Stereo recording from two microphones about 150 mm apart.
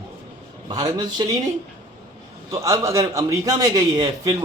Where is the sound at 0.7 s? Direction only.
25° right (ahead or behind).